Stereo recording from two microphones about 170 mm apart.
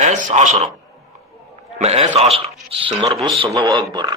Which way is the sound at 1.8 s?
40° right (ahead or behind).